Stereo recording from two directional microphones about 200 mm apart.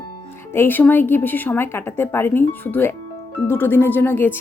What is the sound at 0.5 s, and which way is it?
Speech, 10° left (ahead or behind).